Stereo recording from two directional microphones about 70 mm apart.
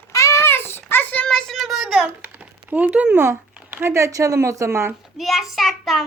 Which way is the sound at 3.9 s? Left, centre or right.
Right.